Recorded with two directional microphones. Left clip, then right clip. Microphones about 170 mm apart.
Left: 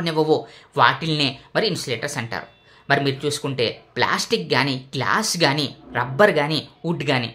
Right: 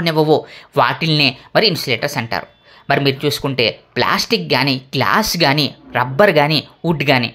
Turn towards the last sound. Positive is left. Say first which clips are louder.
# right 7 dB
turn(degrees=-30)  # may be behind; listen again after turning